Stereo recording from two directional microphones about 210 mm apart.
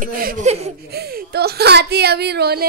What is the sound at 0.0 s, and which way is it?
Speech, 45° right (ahead or behind).